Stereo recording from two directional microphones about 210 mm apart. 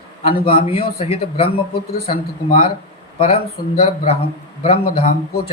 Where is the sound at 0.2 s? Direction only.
30° left (ahead or behind).